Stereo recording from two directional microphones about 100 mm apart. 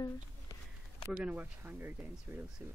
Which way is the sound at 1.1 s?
15° right (ahead or behind).